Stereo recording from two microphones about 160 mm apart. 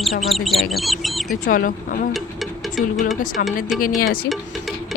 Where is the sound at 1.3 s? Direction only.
60° left (ahead or behind).